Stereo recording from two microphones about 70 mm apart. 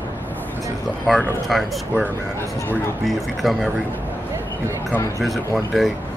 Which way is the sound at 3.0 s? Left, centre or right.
Centre.